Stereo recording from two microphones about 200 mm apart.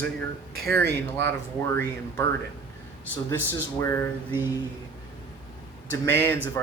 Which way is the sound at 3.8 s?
15° left (ahead or behind).